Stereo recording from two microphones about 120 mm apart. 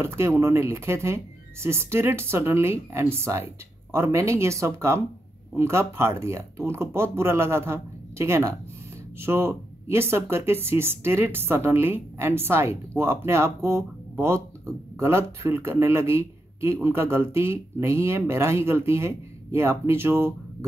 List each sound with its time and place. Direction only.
0.0 s a man's voice: 20° right (ahead or behind)